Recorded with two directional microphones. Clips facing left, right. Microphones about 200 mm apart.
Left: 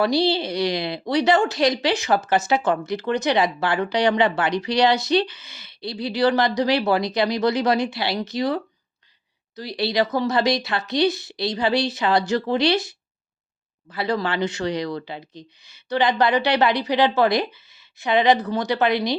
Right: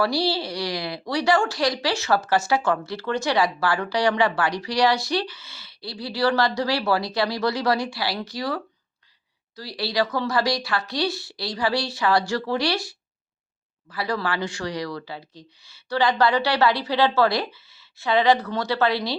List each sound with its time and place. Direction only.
0.0 s speech: 20° left (ahead or behind)